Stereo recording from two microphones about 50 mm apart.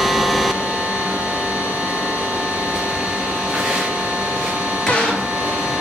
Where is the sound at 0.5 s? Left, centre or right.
Centre.